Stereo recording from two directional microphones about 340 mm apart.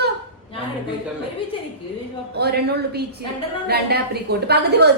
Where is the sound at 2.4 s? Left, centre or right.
Right.